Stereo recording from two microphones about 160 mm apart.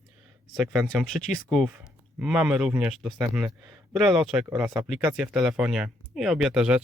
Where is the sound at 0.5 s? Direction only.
Centre (ahead or behind).